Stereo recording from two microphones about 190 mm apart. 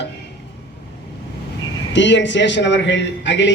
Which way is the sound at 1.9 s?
70° left (ahead or behind).